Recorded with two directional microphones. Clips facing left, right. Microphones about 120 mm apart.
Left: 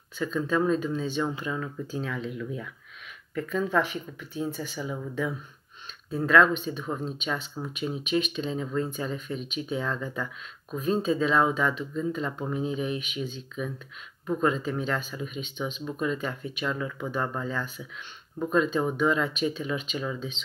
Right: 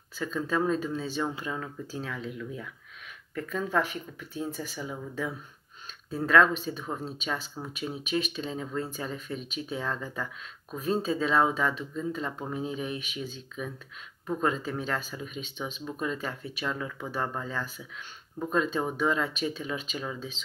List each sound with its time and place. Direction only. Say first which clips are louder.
0.2 s speech: left 3 dB; 35° right (ahead or behind)
2.1 s speech: left 3 dB; 35° left (ahead or behind)
3.3 s speech: left 3 dB; 40° right (ahead or behind)